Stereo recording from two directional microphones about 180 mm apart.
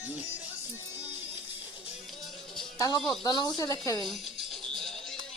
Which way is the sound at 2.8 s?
20° left (ahead or behind).